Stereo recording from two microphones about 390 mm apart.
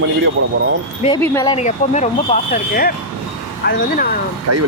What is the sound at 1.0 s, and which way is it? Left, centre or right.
Speech, centre.